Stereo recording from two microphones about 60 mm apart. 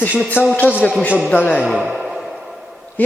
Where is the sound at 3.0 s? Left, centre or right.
Left.